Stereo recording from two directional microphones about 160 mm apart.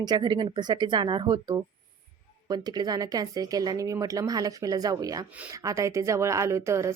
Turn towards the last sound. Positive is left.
turn(degrees=-20)  # may be behind; listen again after turning